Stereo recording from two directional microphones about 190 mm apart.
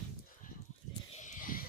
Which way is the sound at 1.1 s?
40° left (ahead or behind).